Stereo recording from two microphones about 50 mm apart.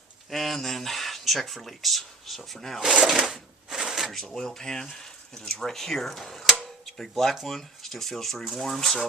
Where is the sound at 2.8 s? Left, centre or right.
Centre.